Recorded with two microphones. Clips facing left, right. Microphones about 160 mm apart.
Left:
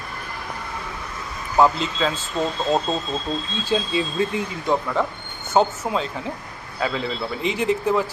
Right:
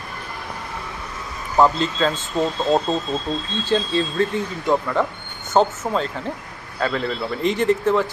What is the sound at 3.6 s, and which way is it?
Speech, 10° left (ahead or behind).